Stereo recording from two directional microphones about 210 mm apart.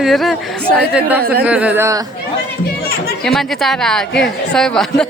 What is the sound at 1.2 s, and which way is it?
Speech, 45° right (ahead or behind).